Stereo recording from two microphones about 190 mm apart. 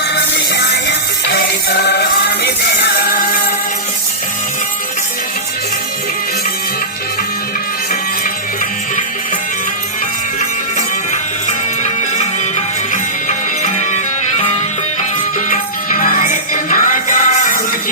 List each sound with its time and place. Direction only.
0.3 s music: 65° left (ahead or behind)
3.0 s music: 50° left (ahead or behind)
10.8 s music: 40° left (ahead or behind)